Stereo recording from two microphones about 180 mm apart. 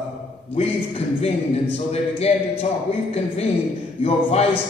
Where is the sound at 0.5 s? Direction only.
35° left (ahead or behind).